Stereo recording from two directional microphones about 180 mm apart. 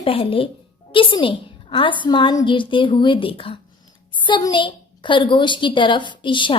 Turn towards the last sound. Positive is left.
turn(degrees=25)  # may be behind; listen again after turning